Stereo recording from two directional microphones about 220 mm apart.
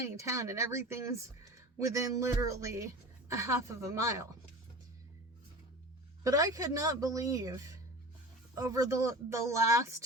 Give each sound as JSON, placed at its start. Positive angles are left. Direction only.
{"t": 0.2, "sound": "speech", "side_deg": -15}
{"t": 6.2, "sound": "speech", "side_deg": -15}